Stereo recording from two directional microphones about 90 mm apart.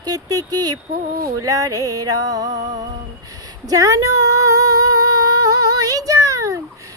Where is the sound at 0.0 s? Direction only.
45° right (ahead or behind).